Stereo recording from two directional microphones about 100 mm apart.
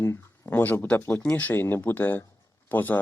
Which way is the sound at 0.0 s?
20° left (ahead or behind).